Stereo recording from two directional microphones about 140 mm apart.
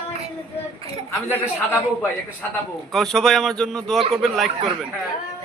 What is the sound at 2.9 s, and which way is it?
Speech, 5° left (ahead or behind).